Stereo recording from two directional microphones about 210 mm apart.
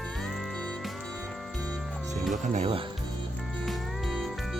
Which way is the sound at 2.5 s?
30° right (ahead or behind).